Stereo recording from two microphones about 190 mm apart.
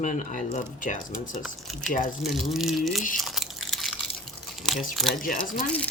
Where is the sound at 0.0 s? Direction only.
40° left (ahead or behind).